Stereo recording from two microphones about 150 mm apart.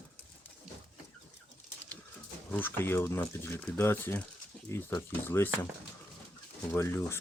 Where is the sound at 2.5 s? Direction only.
15° left (ahead or behind).